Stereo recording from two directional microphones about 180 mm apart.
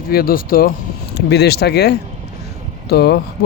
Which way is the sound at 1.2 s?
65° left (ahead or behind).